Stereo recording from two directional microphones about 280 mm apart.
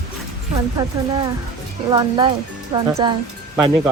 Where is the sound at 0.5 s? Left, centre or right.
Centre.